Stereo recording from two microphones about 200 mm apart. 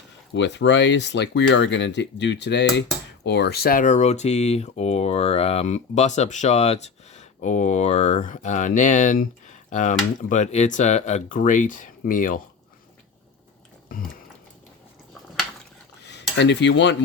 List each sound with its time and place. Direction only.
0.3 s speech: 65° left (ahead or behind); by 12.4 s 40° left (ahead or behind)
16.0 s dishes: 60° left (ahead or behind)